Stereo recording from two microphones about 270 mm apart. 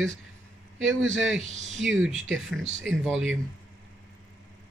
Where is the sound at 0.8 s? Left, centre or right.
Right.